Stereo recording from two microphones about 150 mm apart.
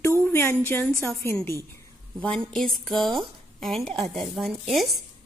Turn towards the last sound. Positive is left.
turn(degrees=0)  # may be behind; listen again after turning